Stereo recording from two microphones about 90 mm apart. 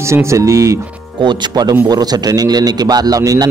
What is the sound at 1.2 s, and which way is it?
A man's voice, 60° right (ahead or behind).